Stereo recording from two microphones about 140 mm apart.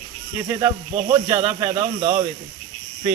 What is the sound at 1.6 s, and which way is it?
Speech, 45° right (ahead or behind).